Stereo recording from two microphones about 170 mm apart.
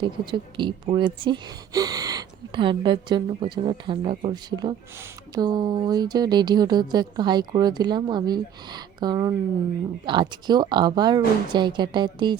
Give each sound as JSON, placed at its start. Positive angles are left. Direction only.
{"t": 0.0, "sound": "speech", "side_deg": -25}